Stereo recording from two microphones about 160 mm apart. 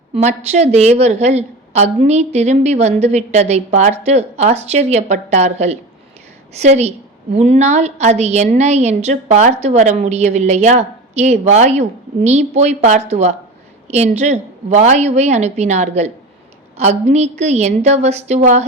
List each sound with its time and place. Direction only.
0.1 s a woman's voice: 45° right (ahead or behind)